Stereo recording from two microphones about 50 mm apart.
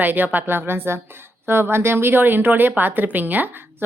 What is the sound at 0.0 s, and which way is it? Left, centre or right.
A woman's voice, right.